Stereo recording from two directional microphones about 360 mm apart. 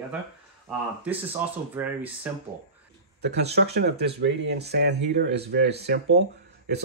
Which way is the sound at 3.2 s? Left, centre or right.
Right.